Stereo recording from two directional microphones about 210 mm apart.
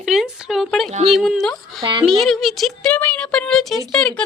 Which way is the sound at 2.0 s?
Centre (ahead or behind).